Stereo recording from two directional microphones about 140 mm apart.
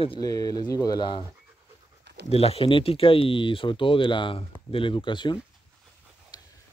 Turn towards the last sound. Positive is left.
turn(degrees=30)  # may be behind; listen again after turning